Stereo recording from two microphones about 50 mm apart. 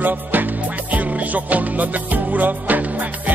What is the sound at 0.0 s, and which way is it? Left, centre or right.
Music, right.